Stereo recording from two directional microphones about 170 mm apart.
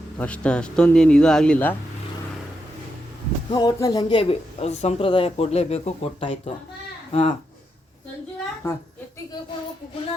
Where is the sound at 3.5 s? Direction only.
20° left (ahead or behind); by 6.5 s 40° left (ahead or behind).